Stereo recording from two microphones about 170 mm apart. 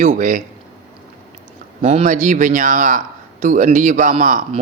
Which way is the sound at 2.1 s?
50° right (ahead or behind).